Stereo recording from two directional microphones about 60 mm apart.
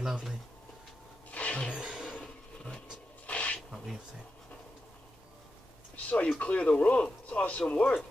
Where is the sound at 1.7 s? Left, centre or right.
Centre.